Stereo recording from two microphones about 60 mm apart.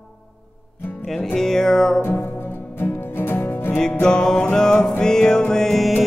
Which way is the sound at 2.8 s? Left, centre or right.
Left.